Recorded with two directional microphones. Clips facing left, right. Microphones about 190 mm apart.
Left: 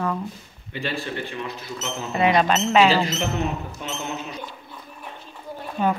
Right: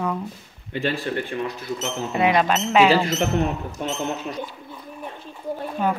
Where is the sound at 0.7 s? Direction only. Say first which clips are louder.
Right 4 dB; 50° right (ahead or behind).